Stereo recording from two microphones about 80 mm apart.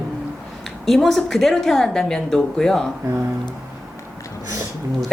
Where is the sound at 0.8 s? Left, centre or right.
Centre.